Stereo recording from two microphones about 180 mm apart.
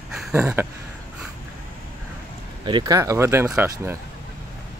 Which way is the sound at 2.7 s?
25° right (ahead or behind).